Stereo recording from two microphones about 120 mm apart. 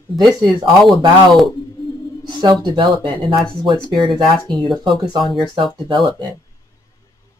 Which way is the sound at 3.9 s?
Centre (ahead or behind).